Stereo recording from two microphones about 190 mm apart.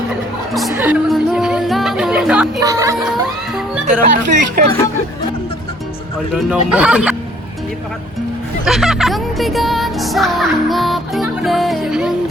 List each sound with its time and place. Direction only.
0.7 s music: 10° right (ahead or behind)
2.6 s music: 15° right (ahead or behind)
4.0 s speech: 40° right (ahead or behind)
6.3 s music: 5° right (ahead or behind)
8.6 s music: centre (ahead or behind)